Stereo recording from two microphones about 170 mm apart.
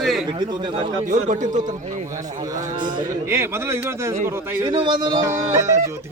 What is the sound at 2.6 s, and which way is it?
Speech, 25° right (ahead or behind).